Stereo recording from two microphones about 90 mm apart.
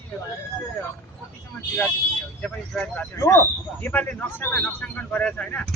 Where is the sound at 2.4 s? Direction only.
10° left (ahead or behind).